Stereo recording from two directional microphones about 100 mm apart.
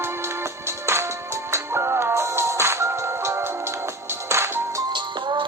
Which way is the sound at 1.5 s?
25° right (ahead or behind).